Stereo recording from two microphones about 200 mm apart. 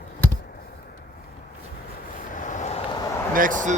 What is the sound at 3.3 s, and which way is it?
Speech, 40° right (ahead or behind).